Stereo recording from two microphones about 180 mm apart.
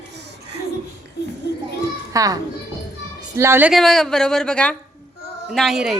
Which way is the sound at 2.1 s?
20° right (ahead or behind).